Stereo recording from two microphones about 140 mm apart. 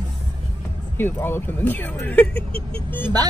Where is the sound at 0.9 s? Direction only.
15° left (ahead or behind).